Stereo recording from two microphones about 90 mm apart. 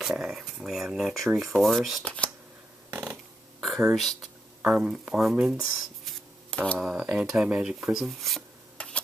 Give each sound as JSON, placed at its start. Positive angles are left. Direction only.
{"t": 0.0, "sound": "speech", "side_deg": -5}
{"t": 2.0, "sound": "shuffling cards", "side_deg": 15}
{"t": 2.9, "sound": "a sound", "side_deg": -20}
{"t": 3.6, "sound": "speech", "side_deg": 0}
{"t": 4.7, "sound": "speech", "side_deg": -15}
{"t": 6.5, "sound": "speech", "side_deg": 15}
{"t": 6.8, "sound": "speech", "side_deg": -10}
{"t": 8.8, "sound": "tick-tock", "side_deg": 15}